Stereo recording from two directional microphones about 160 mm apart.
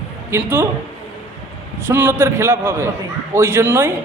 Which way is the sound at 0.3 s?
15° right (ahead or behind).